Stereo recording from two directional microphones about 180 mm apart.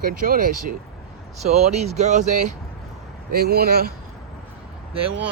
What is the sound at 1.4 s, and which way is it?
Speech, 35° right (ahead or behind).